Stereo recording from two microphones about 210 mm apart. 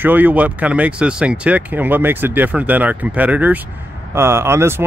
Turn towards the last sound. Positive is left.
turn(degrees=-10)  # may be behind; listen again after turning